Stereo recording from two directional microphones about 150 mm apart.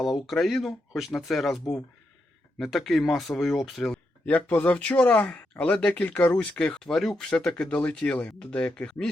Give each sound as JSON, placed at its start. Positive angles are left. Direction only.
{"t": 0.0, "sound": "speech", "side_deg": 0}